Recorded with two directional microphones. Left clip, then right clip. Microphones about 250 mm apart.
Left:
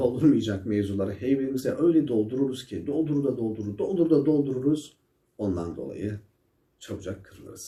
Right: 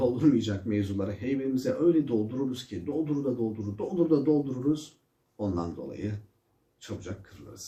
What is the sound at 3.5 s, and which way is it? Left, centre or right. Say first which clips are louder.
Speech: left 5 dB; centre.